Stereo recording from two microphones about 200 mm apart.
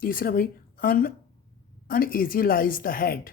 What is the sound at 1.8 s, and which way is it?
Speech, 45° left (ahead or behind).